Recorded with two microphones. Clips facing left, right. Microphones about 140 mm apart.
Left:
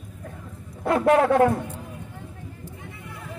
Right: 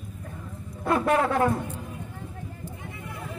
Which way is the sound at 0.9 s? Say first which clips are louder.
Left 5 dB; 70° left (ahead or behind).